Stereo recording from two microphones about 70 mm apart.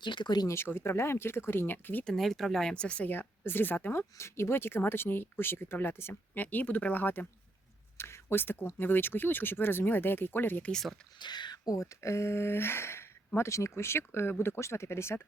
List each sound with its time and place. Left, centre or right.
0.0 s speech: left
0.4 s speech: left
2.0 s speech: centre
3.1 s speech: left
7.9 s speech: left
10.6 s speech: centre
11.2 s speech: left